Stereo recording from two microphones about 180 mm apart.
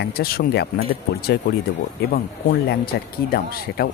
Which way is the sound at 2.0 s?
60° left (ahead or behind).